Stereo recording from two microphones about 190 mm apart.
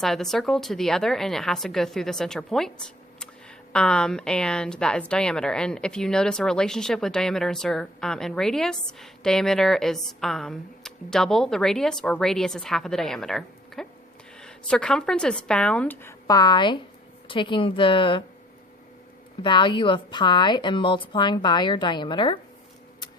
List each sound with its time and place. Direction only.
0.0 s a woman's voice: centre (ahead or behind); by 18.2 s 25° left (ahead or behind)
19.4 s a woman's voice: 25° left (ahead or behind)